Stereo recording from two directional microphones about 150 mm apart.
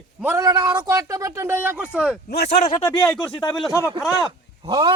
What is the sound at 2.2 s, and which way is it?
Speech, 90° left.